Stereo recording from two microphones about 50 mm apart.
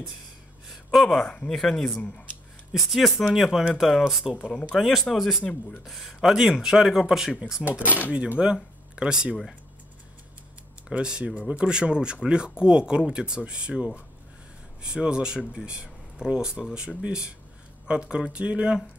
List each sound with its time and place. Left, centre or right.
0.7 s speech: centre
2.7 s speech: centre
4.5 s speech: centre
4.7 s speech: centre
5.4 s speech: left
5.9 s speech: centre
7.8 s speech: right
8.4 s speech: centre
10.9 s speech: centre